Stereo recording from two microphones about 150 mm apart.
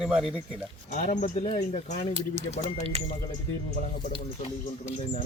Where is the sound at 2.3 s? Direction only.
45° right (ahead or behind).